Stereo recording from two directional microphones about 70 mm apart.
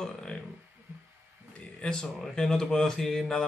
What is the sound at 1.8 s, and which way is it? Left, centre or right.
Speech, centre.